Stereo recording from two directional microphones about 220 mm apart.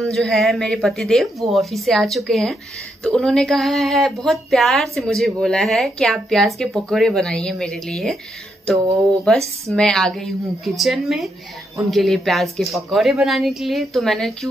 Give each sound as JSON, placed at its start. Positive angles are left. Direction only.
{"t": 0.0, "sound": "speech", "side_deg": 0}
{"t": 9.3, "sound": "speech", "side_deg": 0}